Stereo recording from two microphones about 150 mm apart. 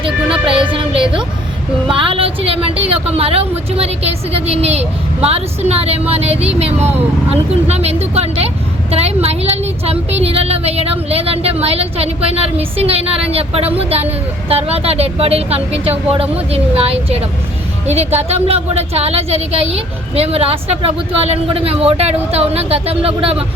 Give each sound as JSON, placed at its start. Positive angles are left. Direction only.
{"t": 0.4, "sound": "music", "side_deg": -35}
{"t": 1.9, "sound": "a woman's voice", "side_deg": -35}